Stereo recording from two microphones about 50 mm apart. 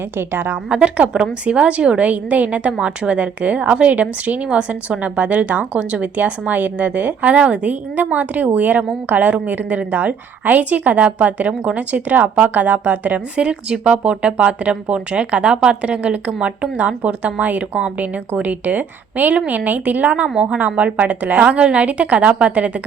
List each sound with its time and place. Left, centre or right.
0.2 s a woman's voice: right
0.7 s a woman's voice: right
20.2 s a woman's voice: centre
20.6 s a woman's voice: right